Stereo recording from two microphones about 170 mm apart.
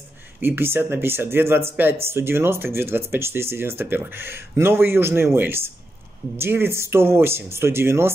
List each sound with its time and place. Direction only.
0.4 s speech: 10° right (ahead or behind)